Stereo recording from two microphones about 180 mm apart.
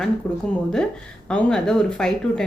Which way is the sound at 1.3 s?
5° left (ahead or behind).